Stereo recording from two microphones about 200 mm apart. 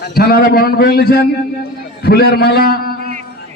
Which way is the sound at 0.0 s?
50° left (ahead or behind).